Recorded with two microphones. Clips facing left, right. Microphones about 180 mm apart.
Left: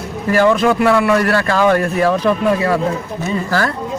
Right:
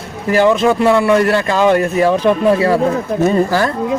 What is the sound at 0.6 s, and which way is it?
A man's voice, 25° right (ahead or behind).